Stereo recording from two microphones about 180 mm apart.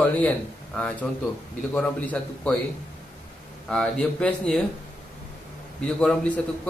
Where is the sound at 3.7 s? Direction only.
5° left (ahead or behind).